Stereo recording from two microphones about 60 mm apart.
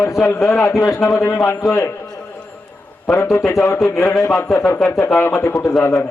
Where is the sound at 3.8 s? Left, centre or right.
Left.